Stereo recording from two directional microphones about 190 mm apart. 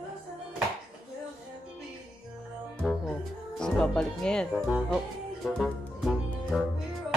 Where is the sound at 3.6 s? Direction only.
5° left (ahead or behind).